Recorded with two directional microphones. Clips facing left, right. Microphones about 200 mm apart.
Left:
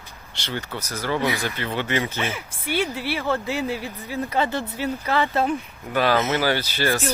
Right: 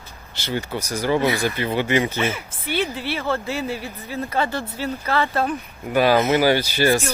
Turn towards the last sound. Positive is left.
turn(degrees=-10)  # may be behind; listen again after turning